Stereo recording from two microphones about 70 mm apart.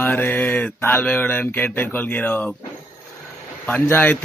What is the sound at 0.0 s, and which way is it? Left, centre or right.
Mantra, left.